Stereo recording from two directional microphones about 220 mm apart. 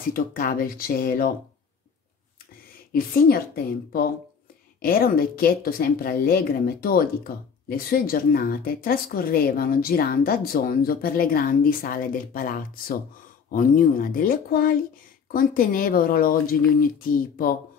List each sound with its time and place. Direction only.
0.1 s speech: 40° left (ahead or behind)
2.9 s a woman's voice: 40° left (ahead or behind)
4.8 s speech: 40° left (ahead or behind)